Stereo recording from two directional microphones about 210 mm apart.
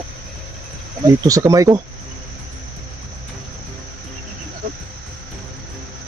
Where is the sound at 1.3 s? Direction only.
15° right (ahead or behind).